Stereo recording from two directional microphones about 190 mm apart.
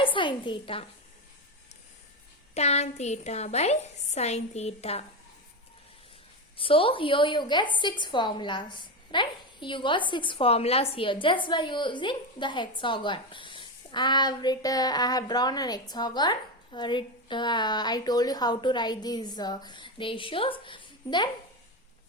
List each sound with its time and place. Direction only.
0.0 s a woman's voice: 25° left (ahead or behind)
2.6 s a woman's voice: 35° left (ahead or behind)
6.6 s a woman's voice: 30° left (ahead or behind)